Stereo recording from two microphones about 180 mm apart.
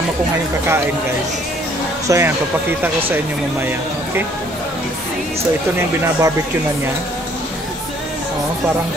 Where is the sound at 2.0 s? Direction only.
15° right (ahead or behind).